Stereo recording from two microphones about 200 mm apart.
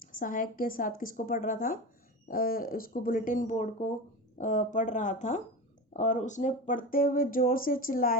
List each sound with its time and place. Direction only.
0.0 s speech: 45° left (ahead or behind)